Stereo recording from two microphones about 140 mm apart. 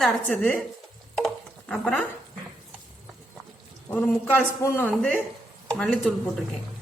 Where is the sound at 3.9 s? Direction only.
10° left (ahead or behind).